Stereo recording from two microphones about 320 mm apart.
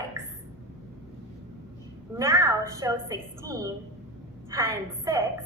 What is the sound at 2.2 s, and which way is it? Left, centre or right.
A woman's voice, centre.